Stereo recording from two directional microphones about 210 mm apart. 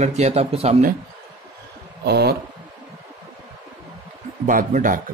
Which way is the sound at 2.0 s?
50° right (ahead or behind).